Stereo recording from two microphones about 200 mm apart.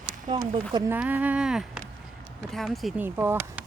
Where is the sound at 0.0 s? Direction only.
20° right (ahead or behind).